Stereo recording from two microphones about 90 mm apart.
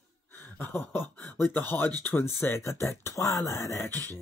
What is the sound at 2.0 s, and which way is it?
Speech, 25° left (ahead or behind).